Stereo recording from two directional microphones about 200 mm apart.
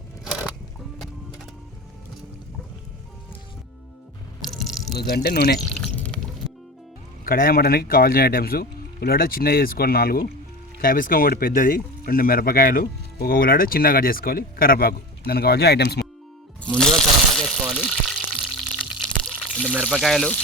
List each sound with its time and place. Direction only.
4.4 s drip: centre (ahead or behind)
4.9 s speech: 55° left (ahead or behind)
5.5 s a sound: 5° left (ahead or behind)
7.3 s speech: 45° left (ahead or behind)
16.7 s a sound: 5° left (ahead or behind)
18.8 s water: centre (ahead or behind)